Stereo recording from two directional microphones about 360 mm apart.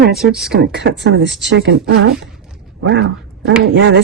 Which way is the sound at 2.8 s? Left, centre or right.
Right.